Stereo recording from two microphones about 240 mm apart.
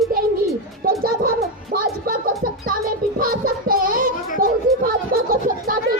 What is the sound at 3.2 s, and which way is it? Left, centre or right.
Child singing, right.